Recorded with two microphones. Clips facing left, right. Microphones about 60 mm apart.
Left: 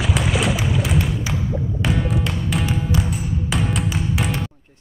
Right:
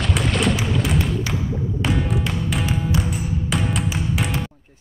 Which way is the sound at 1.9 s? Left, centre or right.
Centre.